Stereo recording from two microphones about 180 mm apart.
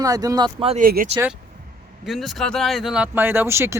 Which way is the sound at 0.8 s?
55° right (ahead or behind).